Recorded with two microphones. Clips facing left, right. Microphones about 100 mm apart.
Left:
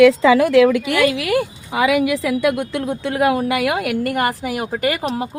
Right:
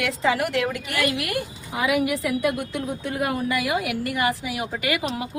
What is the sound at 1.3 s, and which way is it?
A woman's voice, 90° left.